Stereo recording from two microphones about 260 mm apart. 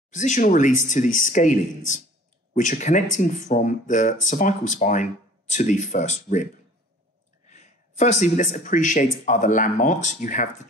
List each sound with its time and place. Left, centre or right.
0.1 s speech: left